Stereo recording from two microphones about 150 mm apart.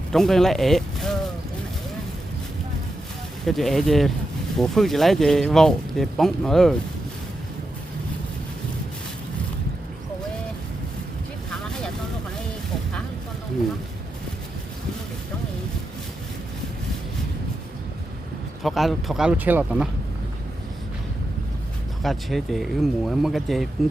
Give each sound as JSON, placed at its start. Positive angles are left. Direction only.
{"t": 0.1, "sound": "speech", "side_deg": 0}
{"t": 3.4, "sound": "speech", "side_deg": 0}
{"t": 18.6, "sound": "speech", "side_deg": 0}
{"t": 22.0, "sound": "speech", "side_deg": 0}